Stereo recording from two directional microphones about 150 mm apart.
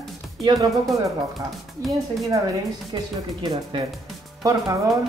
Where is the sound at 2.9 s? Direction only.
30° right (ahead or behind).